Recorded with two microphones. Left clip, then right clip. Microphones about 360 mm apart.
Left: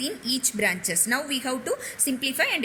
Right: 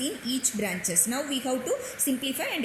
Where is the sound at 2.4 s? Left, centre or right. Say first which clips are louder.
Left 6 dB; left.